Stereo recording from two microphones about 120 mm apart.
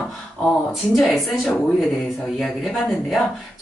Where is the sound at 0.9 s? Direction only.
Centre (ahead or behind).